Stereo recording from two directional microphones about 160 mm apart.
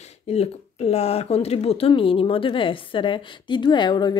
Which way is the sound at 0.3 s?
40° left (ahead or behind).